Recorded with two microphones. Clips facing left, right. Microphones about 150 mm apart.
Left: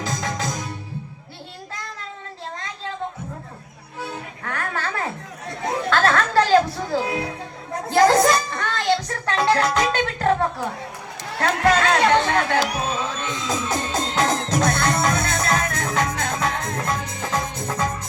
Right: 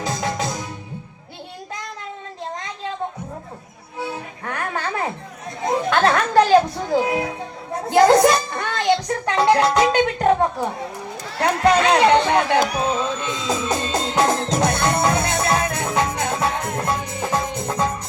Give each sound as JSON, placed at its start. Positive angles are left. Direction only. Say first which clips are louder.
{"t": 0.0, "sound": "music", "louder": "right 3 dB", "side_deg": -15}
{"t": 4.0, "sound": "music", "louder": "right 3 dB", "side_deg": -20}
{"t": 11.3, "sound": "speech", "louder": "right 2 dB", "side_deg": -20}
{"t": 13.2, "sound": "music", "louder": "right 3 dB", "side_deg": -20}